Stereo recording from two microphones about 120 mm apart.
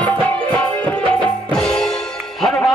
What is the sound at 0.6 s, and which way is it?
Music, 10° left (ahead or behind).